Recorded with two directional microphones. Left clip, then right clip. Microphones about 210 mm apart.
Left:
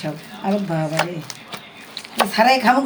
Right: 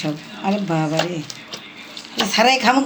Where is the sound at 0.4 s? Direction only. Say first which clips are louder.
Right 1 dB; 10° right (ahead or behind).